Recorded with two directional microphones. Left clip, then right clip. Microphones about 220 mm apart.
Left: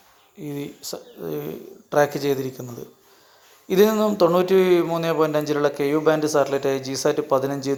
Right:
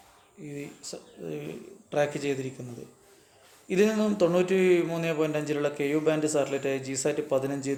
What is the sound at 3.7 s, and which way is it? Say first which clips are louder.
A man's voice: left 7 dB; 20° left (ahead or behind).